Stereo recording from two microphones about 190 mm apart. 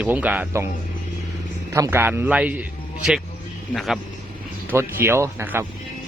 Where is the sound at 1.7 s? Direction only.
15° right (ahead or behind).